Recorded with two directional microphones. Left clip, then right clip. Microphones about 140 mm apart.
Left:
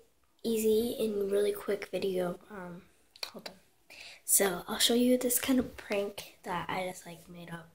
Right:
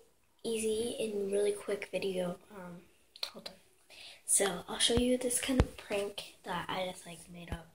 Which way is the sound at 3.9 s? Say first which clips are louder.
Left 3 dB; 40° left (ahead or behind).